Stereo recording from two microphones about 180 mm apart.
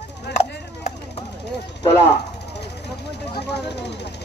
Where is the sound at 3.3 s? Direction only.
65° left (ahead or behind).